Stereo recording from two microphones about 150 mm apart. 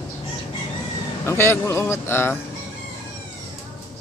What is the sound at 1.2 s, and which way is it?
Speech, 15° left (ahead or behind).